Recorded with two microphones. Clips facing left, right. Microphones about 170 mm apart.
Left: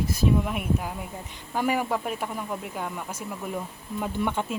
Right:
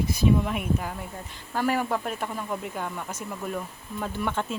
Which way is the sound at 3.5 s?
20° left (ahead or behind).